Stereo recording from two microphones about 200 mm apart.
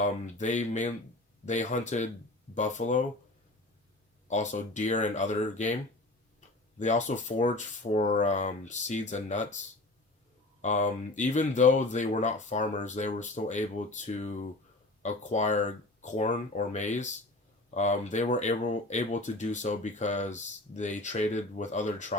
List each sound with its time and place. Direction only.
0.0 s speech: 40° left (ahead or behind)
4.3 s speech: 35° left (ahead or behind)
6.7 s speech: 35° left (ahead or behind)
10.6 s speech: 40° left (ahead or behind)